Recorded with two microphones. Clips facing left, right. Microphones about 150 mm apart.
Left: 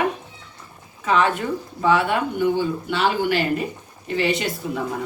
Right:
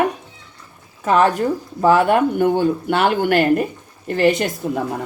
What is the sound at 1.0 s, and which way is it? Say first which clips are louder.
Speech: right 5 dB; 45° right (ahead or behind).